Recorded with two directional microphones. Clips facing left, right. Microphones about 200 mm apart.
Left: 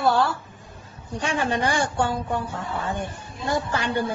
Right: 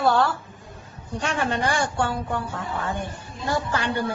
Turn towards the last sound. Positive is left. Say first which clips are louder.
# left 1 dB
turn(degrees=20)  # may be behind; listen again after turning